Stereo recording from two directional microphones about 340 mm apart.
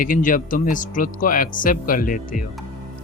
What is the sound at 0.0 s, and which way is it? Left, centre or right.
Speech, left.